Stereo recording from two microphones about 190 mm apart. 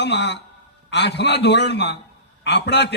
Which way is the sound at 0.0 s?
65° left (ahead or behind).